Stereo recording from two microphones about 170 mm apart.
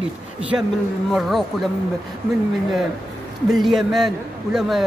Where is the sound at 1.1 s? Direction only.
Centre (ahead or behind).